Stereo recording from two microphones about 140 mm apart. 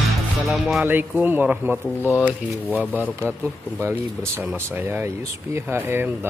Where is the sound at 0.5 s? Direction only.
Centre (ahead or behind).